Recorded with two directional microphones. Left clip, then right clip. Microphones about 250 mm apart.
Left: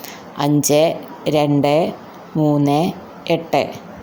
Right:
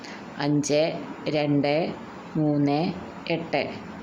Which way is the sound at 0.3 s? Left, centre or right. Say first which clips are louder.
Left 8 dB; left.